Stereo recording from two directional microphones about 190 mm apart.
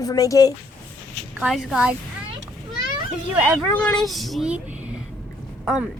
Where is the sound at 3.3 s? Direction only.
5° right (ahead or behind).